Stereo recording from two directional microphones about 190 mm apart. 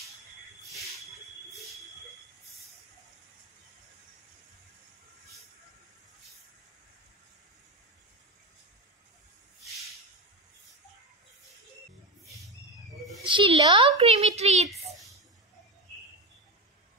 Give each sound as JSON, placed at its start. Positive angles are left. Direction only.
{"t": 13.2, "sound": "a woman's voice", "side_deg": -25}